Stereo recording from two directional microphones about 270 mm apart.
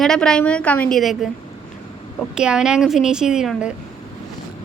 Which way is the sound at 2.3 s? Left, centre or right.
Centre.